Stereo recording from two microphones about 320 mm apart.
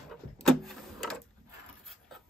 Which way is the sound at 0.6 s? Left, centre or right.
Centre.